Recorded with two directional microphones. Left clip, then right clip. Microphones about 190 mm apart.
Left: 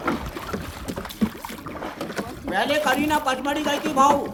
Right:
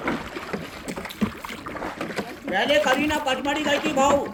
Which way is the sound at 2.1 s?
25° left (ahead or behind).